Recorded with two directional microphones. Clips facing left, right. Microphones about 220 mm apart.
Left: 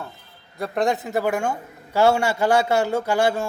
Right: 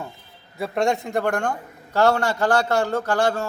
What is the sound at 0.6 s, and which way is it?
A man's voice, centre (ahead or behind).